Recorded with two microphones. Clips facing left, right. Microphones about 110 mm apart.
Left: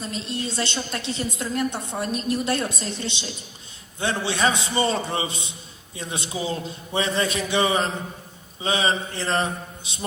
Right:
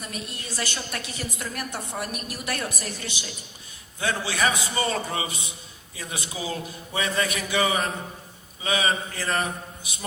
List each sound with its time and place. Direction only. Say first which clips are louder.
0.0 s a woman's voice: left 7 dB; 25° left (ahead or behind)